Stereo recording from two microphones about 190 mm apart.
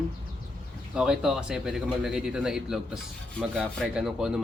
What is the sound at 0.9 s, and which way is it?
Speech, 5° right (ahead or behind).